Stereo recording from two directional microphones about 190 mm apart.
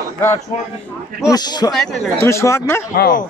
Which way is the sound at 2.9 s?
55° left (ahead or behind).